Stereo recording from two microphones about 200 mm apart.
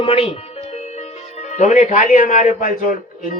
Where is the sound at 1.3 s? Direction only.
35° left (ahead or behind).